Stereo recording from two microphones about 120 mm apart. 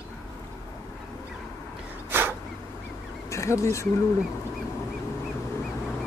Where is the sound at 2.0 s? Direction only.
20° right (ahead or behind).